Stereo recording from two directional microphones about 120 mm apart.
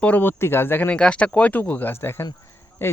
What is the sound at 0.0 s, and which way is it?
Speech, 15° left (ahead or behind).